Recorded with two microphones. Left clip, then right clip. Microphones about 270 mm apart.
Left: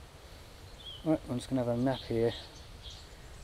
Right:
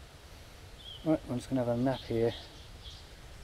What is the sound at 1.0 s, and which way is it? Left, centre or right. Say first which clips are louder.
Speech: right 1 dB; centre.